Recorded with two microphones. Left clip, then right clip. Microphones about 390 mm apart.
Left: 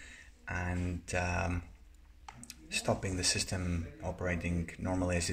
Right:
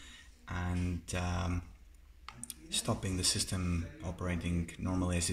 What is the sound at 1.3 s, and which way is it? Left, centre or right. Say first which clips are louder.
Speech: left 4 dB; centre.